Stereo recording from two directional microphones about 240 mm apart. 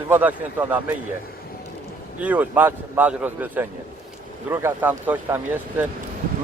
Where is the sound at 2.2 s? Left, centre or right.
Centre.